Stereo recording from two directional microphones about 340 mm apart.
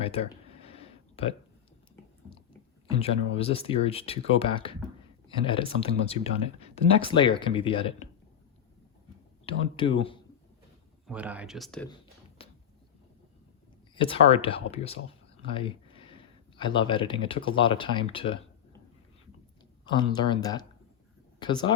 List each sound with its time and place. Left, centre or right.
0.0 s a sound: centre
3.0 s speech: centre
9.5 s speech: centre
11.0 s speech: centre
12.4 s a sound: centre
13.9 s speech: centre
19.8 s speech: centre